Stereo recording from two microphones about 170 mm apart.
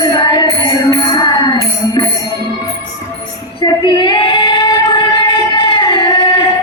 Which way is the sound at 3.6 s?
25° left (ahead or behind).